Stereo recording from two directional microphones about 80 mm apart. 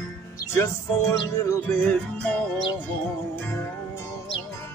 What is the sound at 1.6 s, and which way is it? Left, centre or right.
Music, centre.